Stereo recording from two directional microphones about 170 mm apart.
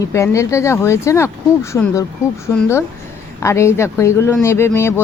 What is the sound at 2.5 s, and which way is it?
Speech, 15° left (ahead or behind).